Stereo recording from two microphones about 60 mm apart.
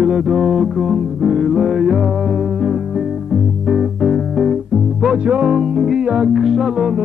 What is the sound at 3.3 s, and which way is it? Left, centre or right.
Music, centre.